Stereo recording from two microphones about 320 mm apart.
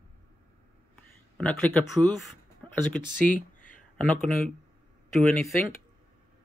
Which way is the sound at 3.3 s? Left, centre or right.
Left.